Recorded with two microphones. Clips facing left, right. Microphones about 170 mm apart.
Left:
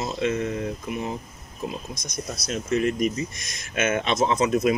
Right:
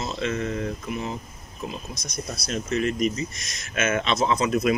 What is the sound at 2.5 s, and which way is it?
Speech, 15° left (ahead or behind).